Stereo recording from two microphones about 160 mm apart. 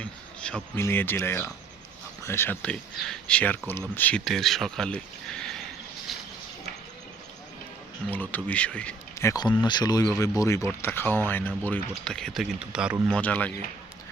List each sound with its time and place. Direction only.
0.0 s a sound: 5° left (ahead or behind)
0.8 s speech: 15° left (ahead or behind)
6.1 s a sound: centre (ahead or behind)
8.1 s speech: 10° left (ahead or behind)
9.1 s speech: 20° left (ahead or behind); by 13.0 s 5° right (ahead or behind)
13.1 s speech: 5° left (ahead or behind)